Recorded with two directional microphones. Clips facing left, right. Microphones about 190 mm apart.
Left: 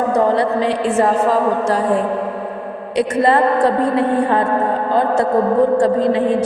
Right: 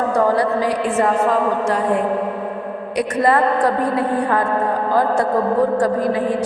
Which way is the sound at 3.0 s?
25° left (ahead or behind).